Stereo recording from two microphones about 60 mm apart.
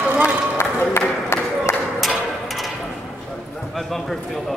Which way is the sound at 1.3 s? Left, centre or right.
Left.